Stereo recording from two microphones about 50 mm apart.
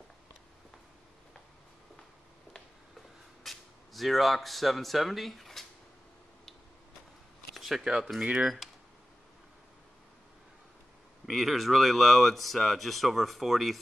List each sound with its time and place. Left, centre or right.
3.4 s speech: centre
7.5 s a sound: centre
8.2 s speech: centre
11.2 s speech: centre